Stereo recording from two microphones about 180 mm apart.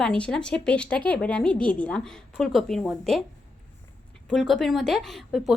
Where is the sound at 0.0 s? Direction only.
5° left (ahead or behind).